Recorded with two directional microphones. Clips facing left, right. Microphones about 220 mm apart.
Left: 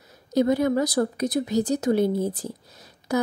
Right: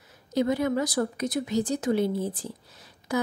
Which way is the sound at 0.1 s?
40° left (ahead or behind).